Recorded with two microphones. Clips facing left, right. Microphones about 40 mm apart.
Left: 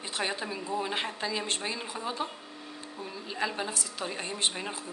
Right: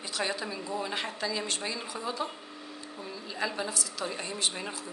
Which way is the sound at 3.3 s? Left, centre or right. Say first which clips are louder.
Left 1 dB; left.